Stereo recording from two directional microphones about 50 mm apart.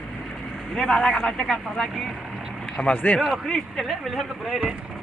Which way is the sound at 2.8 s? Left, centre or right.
Left.